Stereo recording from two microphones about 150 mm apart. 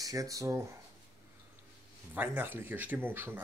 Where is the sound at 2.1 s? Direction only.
15° right (ahead or behind).